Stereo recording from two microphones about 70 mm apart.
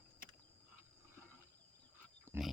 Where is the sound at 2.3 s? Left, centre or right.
Right.